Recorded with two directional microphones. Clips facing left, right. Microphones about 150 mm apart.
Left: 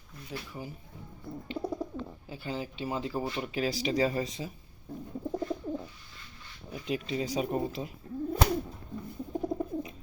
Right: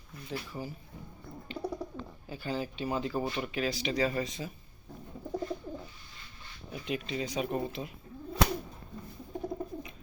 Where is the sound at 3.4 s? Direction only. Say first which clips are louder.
Left 2 dB; 35° left (ahead or behind).